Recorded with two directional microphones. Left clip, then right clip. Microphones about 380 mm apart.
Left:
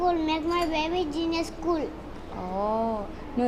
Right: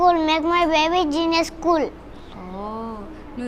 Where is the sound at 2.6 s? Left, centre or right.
Centre.